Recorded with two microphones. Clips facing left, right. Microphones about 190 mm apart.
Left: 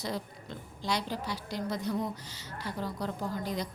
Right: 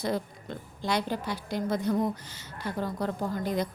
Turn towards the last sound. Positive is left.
turn(degrees=-55)  # may be behind; listen again after turning